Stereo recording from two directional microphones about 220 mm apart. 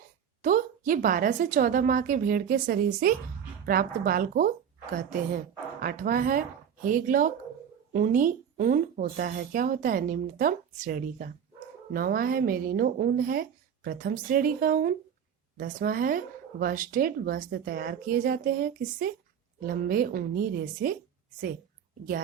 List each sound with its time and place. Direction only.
0.4 s speech: 40° right (ahead or behind)